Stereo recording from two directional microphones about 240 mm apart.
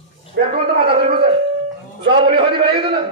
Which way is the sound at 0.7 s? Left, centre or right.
Right.